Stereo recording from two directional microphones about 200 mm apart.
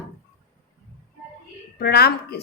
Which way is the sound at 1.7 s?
50° left (ahead or behind).